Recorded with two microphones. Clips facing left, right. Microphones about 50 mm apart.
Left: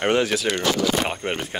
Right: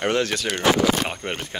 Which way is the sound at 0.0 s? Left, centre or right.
Centre.